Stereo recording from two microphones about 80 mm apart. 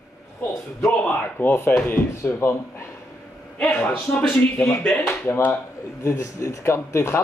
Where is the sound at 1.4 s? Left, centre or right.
Left.